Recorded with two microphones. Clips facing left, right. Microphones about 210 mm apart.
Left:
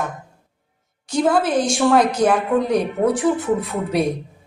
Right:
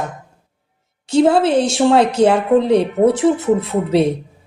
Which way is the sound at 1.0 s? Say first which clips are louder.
Right 5 dB; 25° right (ahead or behind).